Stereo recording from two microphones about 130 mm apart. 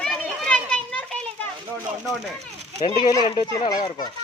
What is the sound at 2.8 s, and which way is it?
Speech, 40° left (ahead or behind).